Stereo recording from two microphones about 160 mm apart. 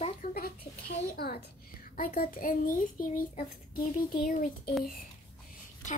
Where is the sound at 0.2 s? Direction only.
65° left (ahead or behind).